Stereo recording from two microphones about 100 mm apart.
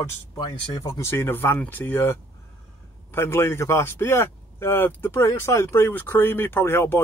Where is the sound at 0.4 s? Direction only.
35° left (ahead or behind).